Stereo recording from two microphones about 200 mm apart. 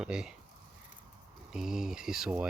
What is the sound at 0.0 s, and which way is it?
Speech, 5° right (ahead or behind).